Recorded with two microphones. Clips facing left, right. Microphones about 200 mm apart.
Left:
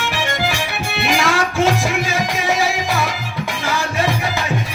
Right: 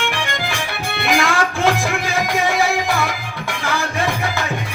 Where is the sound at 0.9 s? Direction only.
55° right (ahead or behind).